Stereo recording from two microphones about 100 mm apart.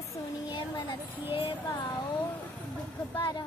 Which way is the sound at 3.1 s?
50° left (ahead or behind).